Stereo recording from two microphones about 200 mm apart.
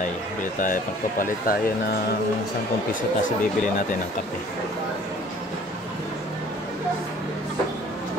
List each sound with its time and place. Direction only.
0.4 s speech: 40° left (ahead or behind)
2.9 s speech: 40° left (ahead or behind)